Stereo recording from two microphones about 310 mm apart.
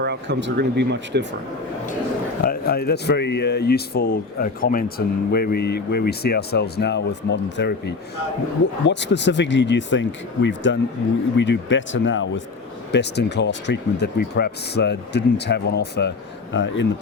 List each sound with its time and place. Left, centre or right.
0.0 s speech: right
2.4 s speech: left